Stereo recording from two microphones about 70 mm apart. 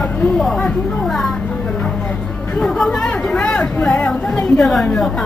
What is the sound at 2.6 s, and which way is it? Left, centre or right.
Music, centre.